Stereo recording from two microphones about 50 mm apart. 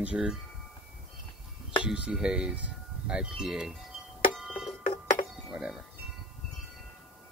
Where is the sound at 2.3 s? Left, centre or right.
Right.